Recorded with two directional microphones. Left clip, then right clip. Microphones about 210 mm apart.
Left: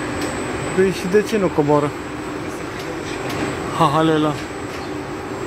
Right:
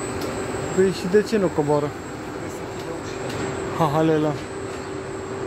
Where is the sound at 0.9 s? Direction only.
10° right (ahead or behind).